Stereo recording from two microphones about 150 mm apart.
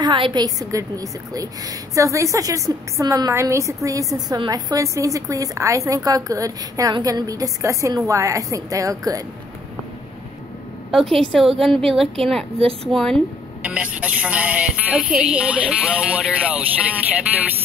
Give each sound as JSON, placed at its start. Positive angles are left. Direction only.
{"t": 0.0, "sound": "a woman's voice", "side_deg": -30}
{"t": 10.9, "sound": "a woman's voice", "side_deg": 0}
{"t": 12.8, "sound": "a woman's voice", "side_deg": 5}
{"t": 13.6, "sound": "a woman's voice", "side_deg": -10}